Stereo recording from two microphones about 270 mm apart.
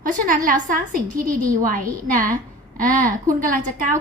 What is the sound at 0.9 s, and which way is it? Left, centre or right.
A woman's voice, right.